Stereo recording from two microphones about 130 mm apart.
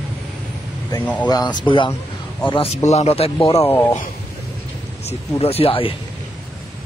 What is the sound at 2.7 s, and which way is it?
Speech, 55° left (ahead or behind).